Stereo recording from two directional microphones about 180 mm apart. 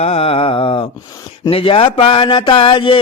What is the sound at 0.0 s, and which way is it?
Mantra, 35° left (ahead or behind).